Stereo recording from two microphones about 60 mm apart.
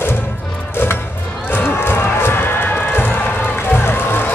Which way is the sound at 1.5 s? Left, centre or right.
Left.